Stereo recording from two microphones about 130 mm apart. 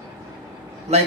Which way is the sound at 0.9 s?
55° right (ahead or behind).